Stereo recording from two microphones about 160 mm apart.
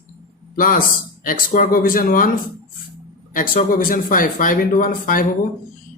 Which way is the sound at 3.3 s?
60° left (ahead or behind).